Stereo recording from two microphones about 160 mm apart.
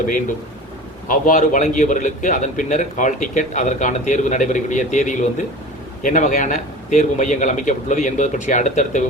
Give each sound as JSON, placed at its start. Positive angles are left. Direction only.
{"t": 1.0, "sound": "a man's voice", "side_deg": 55}